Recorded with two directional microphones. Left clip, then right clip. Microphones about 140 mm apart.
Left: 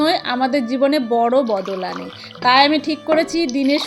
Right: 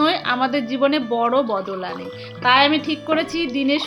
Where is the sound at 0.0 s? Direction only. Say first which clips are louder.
Left 1 dB; 20° left (ahead or behind).